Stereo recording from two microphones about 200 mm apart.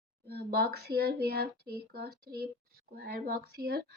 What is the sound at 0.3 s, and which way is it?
A woman's voice, 50° right (ahead or behind).